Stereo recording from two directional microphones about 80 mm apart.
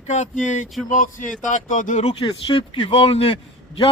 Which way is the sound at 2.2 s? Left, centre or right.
Left.